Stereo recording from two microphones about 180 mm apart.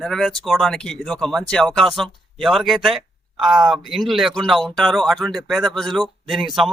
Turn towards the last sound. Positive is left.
turn(degrees=0)  # may be behind; listen again after turning